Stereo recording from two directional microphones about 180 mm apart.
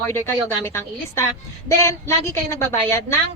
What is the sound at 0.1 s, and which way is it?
A woman's voice, 15° left (ahead or behind).